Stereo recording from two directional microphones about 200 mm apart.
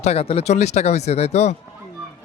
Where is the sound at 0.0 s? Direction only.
30° left (ahead or behind).